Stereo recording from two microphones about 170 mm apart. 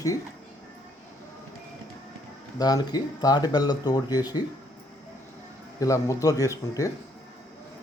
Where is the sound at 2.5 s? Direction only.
20° left (ahead or behind).